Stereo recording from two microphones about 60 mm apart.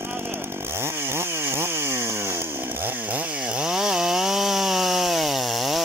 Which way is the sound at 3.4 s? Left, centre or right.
Centre.